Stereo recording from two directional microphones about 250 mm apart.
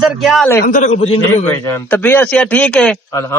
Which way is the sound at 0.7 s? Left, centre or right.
Left.